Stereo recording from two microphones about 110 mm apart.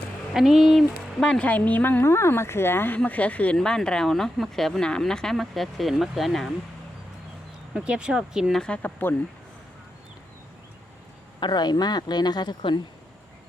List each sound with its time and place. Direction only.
0.3 s speech: 5° right (ahead or behind)
7.7 s speech: 10° right (ahead or behind)
8.6 s speech: 10° left (ahead or behind)
11.3 s speech: 45° left (ahead or behind)